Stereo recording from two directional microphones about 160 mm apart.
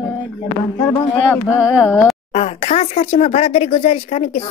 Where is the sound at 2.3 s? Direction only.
40° left (ahead or behind).